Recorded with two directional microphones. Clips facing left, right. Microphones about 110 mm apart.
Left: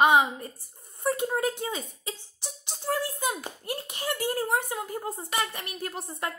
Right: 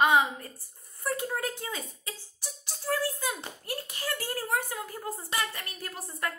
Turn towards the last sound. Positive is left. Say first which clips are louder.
# left 2 dB
turn(degrees=25)  # may be behind; listen again after turning